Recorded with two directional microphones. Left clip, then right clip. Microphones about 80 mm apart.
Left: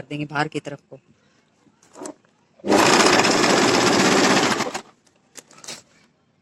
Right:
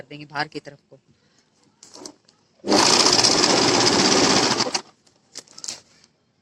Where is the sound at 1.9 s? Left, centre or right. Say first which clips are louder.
Left 5 dB; left.